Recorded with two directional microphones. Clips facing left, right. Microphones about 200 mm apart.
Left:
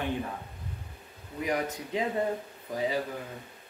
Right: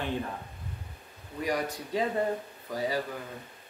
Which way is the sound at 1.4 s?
20° left (ahead or behind).